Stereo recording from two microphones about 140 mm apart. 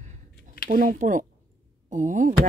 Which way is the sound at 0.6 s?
70° right (ahead or behind).